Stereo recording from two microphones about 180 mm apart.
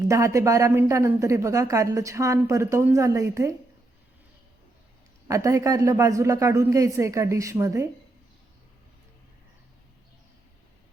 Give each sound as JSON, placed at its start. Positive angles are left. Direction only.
{"t": 0.1, "sound": "a woman's voice", "side_deg": -15}
{"t": 5.3, "sound": "a woman's voice", "side_deg": -15}